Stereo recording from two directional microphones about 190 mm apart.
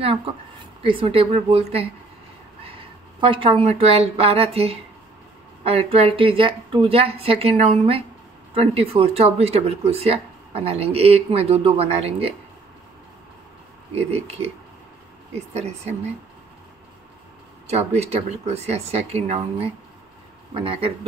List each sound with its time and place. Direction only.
0.0 s a woman's voice: 30° right (ahead or behind)
13.9 s speech: 35° right (ahead or behind)
17.6 s speech: 35° right (ahead or behind)
20.6 s a woman's voice: 30° right (ahead or behind)